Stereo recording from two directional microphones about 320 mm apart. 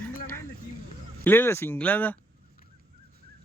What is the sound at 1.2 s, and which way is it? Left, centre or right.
Speech, centre.